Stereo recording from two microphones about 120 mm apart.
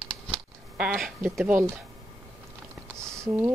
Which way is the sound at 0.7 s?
5° right (ahead or behind).